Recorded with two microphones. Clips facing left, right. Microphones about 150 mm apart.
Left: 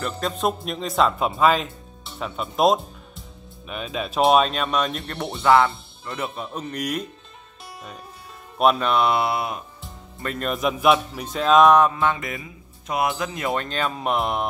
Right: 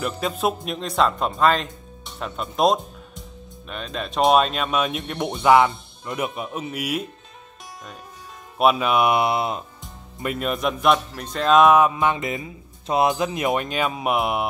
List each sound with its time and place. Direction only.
0.0 s speech: 5° right (ahead or behind)
8.5 s speech: 5° right (ahead or behind); by 9.7 s 25° right (ahead or behind)
10.2 s speech: 5° right (ahead or behind)